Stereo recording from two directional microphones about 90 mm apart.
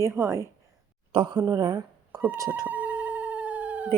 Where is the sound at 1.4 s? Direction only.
45° right (ahead or behind).